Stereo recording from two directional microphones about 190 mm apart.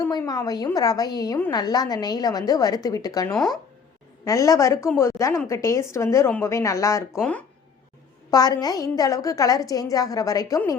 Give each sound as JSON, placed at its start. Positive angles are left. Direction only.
{"t": 0.0, "sound": "a woman's voice", "side_deg": 20}
{"t": 8.3, "sound": "a woman's voice", "side_deg": 20}